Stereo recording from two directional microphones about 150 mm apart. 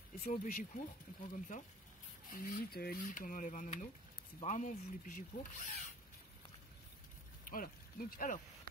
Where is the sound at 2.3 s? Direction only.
70° left (ahead or behind).